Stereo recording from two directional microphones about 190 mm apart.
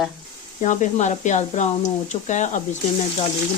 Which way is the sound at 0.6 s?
40° left (ahead or behind).